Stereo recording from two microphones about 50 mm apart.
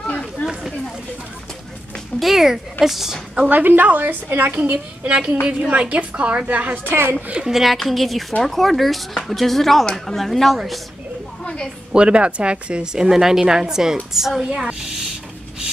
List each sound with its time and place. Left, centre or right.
0.0 s a sound: left
2.1 s speech: centre
3.4 s a woman's voice: right
5.1 s a woman's voice: right
6.8 s a woman's voice: right
7.4 s speech: centre
11.4 s a sound: centre
11.9 s a woman's voice: centre